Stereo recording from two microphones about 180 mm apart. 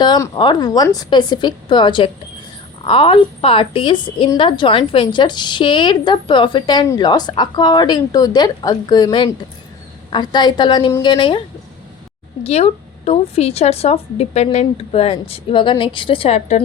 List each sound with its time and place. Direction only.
0.0 s a woman's voice: 25° left (ahead or behind)